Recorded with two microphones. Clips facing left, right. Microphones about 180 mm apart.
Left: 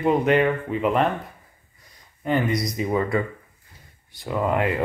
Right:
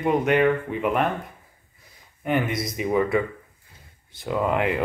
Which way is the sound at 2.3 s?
Centre (ahead or behind).